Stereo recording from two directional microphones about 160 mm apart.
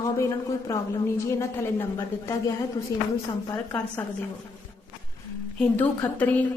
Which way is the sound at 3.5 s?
15° left (ahead or behind).